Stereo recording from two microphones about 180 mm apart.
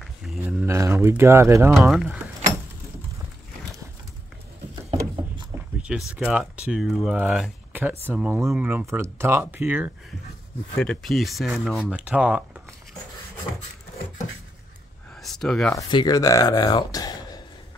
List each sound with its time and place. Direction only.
0.0 s a sound: 5° right (ahead or behind)
0.7 s speech: 15° right (ahead or behind)
1.7 s speech: centre (ahead or behind)
5.5 s speech: 5° right (ahead or behind)
10.8 s speech: 5° left (ahead or behind)
15.2 s speech: 5° left (ahead or behind)
15.7 s speech: 20° left (ahead or behind)